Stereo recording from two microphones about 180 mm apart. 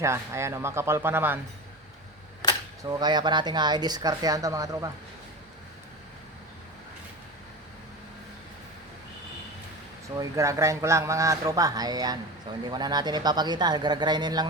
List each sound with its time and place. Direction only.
0.0 s speech: 15° right (ahead or behind)
2.8 s speech: 25° right (ahead or behind)
10.2 s speech: 15° right (ahead or behind)